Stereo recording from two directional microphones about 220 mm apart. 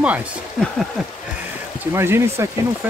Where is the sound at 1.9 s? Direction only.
10° right (ahead or behind).